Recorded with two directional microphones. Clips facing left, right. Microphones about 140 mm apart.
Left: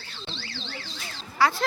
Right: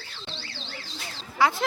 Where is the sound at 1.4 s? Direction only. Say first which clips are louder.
Even; 20° right (ahead or behind).